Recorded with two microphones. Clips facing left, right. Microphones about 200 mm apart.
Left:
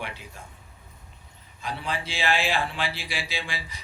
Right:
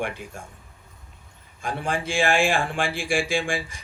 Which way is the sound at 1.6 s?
50° right (ahead or behind).